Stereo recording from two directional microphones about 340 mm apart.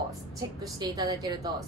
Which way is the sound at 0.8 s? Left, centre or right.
Centre.